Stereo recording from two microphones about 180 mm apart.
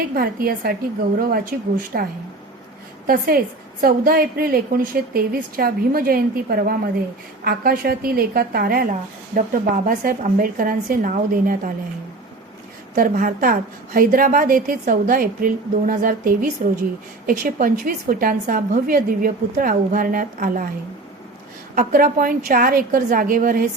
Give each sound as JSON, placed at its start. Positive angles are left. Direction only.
{"t": 0.1, "sound": "a woman's voice", "side_deg": -55}
{"t": 13.0, "sound": "speech", "side_deg": -50}
{"t": 21.8, "sound": "speech", "side_deg": -50}